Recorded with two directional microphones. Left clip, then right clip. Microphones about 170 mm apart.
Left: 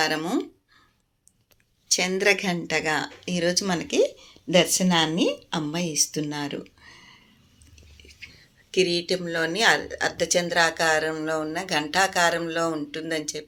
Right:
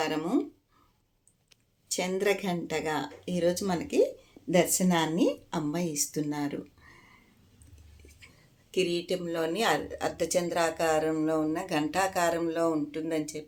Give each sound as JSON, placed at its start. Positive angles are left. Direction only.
{"t": 0.0, "sound": "speech", "side_deg": -10}
{"t": 2.0, "sound": "a woman's voice", "side_deg": -10}
{"t": 8.7, "sound": "speech", "side_deg": -10}